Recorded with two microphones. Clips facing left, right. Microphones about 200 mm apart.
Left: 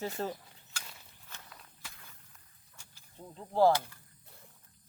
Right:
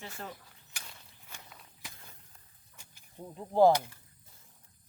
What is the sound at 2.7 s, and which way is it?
Vehicle, 15° right (ahead or behind).